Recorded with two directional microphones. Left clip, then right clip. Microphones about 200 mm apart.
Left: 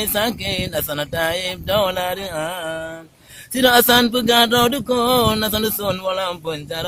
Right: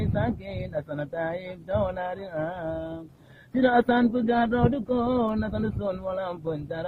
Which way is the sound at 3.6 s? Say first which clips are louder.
Left 8 dB; 30° left (ahead or behind).